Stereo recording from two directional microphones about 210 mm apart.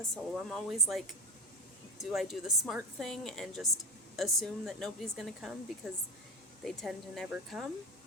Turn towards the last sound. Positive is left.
turn(degrees=0)  # may be behind; listen again after turning